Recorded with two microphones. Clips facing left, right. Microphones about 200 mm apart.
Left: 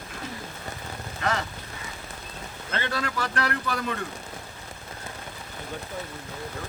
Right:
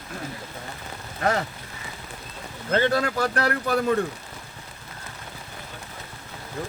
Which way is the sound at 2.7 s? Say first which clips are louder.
Right 8 dB; 45° right (ahead or behind).